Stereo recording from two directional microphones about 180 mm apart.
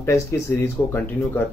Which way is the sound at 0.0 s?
15° left (ahead or behind).